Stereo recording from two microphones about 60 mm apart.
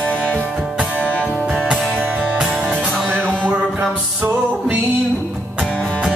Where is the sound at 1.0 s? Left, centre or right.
Right.